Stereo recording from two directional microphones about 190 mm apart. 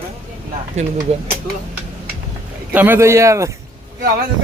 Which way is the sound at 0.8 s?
35° right (ahead or behind).